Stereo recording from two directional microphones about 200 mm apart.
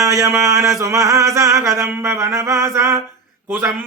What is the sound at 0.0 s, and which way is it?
Chant, 15° right (ahead or behind).